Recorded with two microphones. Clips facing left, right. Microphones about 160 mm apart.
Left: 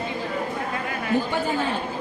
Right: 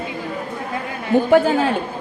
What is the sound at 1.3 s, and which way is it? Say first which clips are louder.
Speech: right 10 dB; 90° right.